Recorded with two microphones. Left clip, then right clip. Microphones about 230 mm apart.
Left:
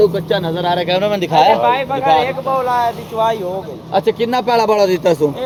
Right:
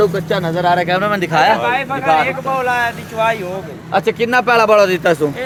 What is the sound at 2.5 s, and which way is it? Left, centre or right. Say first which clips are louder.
Speech: left 2 dB; right.